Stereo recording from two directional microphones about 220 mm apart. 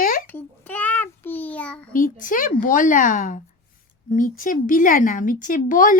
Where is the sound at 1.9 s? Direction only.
40° left (ahead or behind).